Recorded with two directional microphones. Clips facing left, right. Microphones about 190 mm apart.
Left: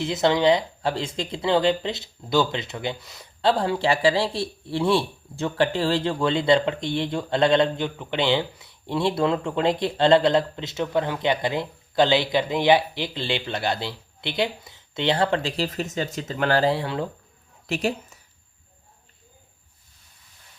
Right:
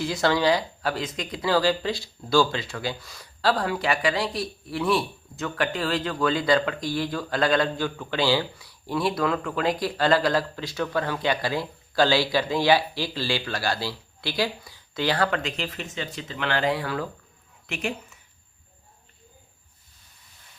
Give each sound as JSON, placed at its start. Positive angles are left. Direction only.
{"t": 0.0, "sound": "a woman's voice", "side_deg": 20}